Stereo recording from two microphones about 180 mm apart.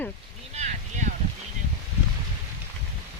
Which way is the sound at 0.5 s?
40° right (ahead or behind).